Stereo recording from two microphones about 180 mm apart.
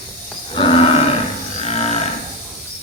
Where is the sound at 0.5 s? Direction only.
30° left (ahead or behind).